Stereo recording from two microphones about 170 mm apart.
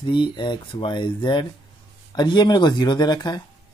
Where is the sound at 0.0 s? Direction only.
30° left (ahead or behind).